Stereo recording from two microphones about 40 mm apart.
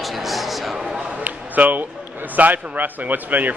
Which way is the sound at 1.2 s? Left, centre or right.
Right.